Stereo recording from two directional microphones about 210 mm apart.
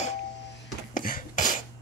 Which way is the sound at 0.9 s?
40° left (ahead or behind).